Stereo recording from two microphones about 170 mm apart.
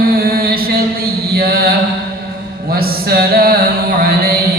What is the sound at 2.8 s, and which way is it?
Mantra, 65° right (ahead or behind).